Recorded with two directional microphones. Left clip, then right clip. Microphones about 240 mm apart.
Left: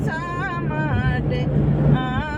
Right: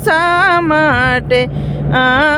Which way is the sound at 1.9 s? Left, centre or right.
Right.